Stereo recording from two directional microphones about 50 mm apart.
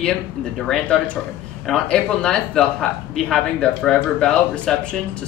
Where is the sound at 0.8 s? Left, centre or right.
Left.